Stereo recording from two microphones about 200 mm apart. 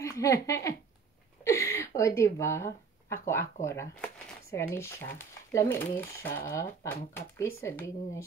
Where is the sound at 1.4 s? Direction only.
15° left (ahead or behind).